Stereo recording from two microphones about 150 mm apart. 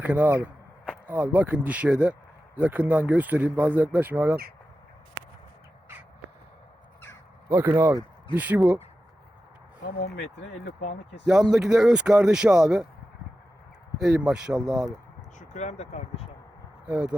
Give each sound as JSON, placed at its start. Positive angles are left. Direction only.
{"t": 0.0, "sound": "speech", "side_deg": -10}
{"t": 7.5, "sound": "speech", "side_deg": -15}
{"t": 10.4, "sound": "speech", "side_deg": 90}
{"t": 11.3, "sound": "speech", "side_deg": -5}
{"t": 14.0, "sound": "speech", "side_deg": -5}
{"t": 15.4, "sound": "speech", "side_deg": 50}
{"t": 16.8, "sound": "speech", "side_deg": -10}